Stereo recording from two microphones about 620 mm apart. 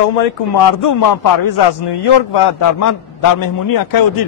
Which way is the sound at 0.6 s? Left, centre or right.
Left.